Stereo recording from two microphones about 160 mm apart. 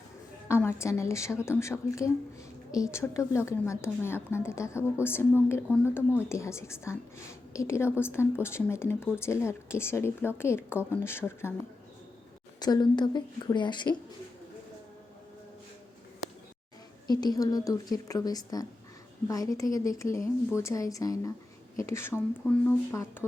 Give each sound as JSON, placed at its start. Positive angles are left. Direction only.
{"t": 0.4, "sound": "a woman's voice", "side_deg": 15}
{"t": 12.5, "sound": "a woman's voice", "side_deg": 25}
{"t": 17.1, "sound": "a woman's voice", "side_deg": 25}